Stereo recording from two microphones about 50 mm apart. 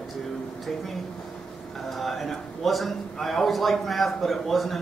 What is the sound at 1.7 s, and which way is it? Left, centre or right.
A man's voice, centre.